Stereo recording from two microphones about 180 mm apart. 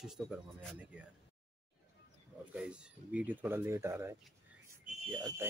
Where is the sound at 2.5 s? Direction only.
5° right (ahead or behind).